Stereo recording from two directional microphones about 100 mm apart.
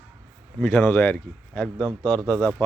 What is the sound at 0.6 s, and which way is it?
Speech, 15° left (ahead or behind).